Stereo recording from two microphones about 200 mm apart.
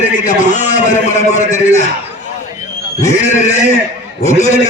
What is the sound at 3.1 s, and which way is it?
A man's voice, 35° left (ahead or behind).